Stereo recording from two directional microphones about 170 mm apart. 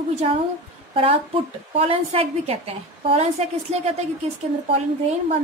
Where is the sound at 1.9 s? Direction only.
35° right (ahead or behind).